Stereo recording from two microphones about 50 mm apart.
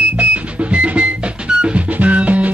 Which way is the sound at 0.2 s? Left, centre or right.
Right.